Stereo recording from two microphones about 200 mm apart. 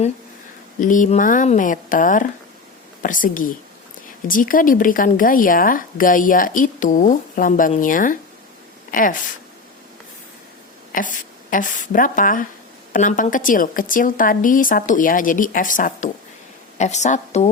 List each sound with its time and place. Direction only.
0.8 s speech: 40° left (ahead or behind)
10.9 s speech: 40° left (ahead or behind)